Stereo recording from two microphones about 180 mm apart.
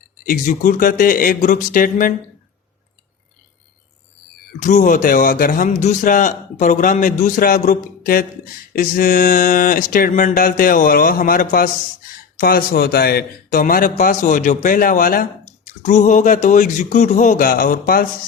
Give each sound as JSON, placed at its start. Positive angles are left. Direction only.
{"t": 0.3, "sound": "a man's voice", "side_deg": 50}
{"t": 4.6, "sound": "a man's voice", "side_deg": 45}